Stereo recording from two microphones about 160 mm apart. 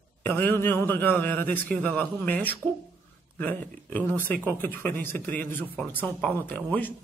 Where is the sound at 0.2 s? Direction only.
10° left (ahead or behind).